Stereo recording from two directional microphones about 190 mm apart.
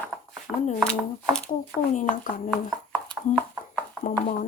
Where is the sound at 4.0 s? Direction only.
40° left (ahead or behind).